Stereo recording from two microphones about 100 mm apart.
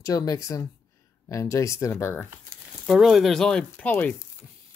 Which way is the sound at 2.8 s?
5° right (ahead or behind).